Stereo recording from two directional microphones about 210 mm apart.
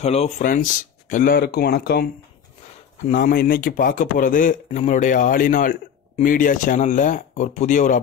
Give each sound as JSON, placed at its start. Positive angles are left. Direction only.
{"t": 0.0, "sound": "a man's voice", "side_deg": 30}